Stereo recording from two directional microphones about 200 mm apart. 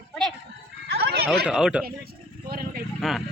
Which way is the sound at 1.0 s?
50° right (ahead or behind).